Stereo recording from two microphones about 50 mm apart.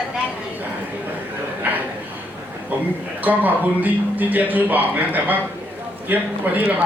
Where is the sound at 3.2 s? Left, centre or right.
Right.